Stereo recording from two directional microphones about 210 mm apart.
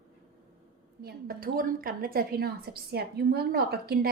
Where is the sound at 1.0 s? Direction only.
45° right (ahead or behind).